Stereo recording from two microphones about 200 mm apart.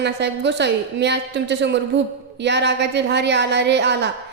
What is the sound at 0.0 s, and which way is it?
A woman's voice, 60° right (ahead or behind).